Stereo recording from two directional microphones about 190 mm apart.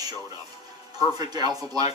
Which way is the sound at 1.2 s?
20° right (ahead or behind).